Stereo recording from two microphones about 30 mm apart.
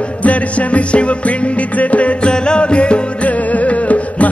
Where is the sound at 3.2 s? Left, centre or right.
Left.